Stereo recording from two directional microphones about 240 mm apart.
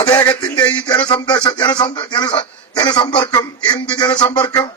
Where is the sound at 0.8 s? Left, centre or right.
Centre.